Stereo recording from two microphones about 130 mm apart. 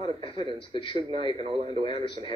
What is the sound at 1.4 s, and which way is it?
Speech, 45° right (ahead or behind).